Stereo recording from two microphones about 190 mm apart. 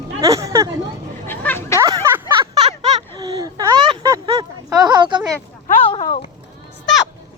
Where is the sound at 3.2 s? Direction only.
20° right (ahead or behind).